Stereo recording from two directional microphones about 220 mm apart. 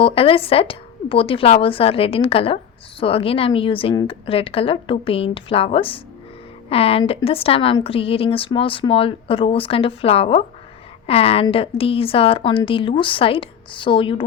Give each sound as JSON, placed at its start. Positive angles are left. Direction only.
{"t": 0.0, "sound": "a woman's voice", "side_deg": 25}